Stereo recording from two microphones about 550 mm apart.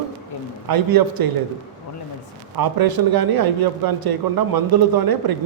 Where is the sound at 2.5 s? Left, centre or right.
Right.